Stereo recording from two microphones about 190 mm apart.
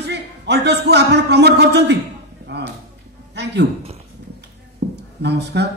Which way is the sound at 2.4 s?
60° right (ahead or behind).